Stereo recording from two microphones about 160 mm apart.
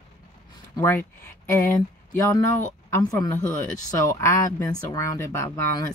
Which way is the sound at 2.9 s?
20° left (ahead or behind).